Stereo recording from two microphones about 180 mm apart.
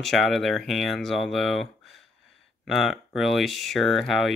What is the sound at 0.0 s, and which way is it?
Speech, centre (ahead or behind).